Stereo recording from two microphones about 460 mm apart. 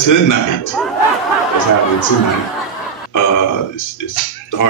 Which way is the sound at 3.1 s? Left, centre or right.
Left.